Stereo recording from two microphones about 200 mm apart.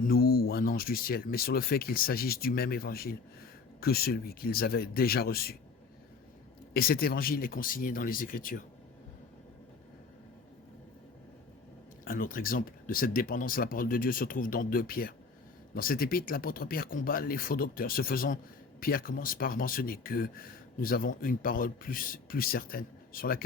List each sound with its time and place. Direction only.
0.0 s speech: 50° left (ahead or behind)
6.7 s speech: 50° left (ahead or behind)
12.0 s speech: 45° left (ahead or behind)